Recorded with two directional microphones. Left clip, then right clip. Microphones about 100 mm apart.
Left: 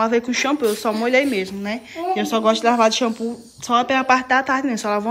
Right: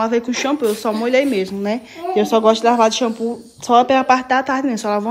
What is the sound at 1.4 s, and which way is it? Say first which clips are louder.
Speech: right 5 dB; 65° right (ahead or behind).